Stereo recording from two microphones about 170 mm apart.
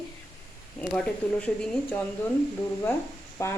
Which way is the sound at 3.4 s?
15° left (ahead or behind).